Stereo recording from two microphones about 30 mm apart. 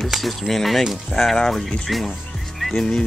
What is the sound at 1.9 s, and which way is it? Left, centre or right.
Speech, centre.